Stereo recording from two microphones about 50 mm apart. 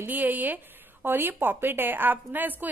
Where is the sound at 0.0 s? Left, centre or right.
Right.